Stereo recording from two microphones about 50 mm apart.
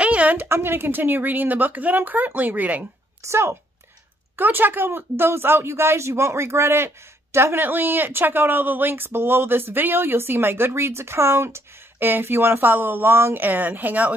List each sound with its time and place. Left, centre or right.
0.0 s a sound: right
0.5 s speech: right
3.2 s speech: right
4.4 s speech: right
7.5 s speech: right
12.0 s speech: right
13.4 s speech: right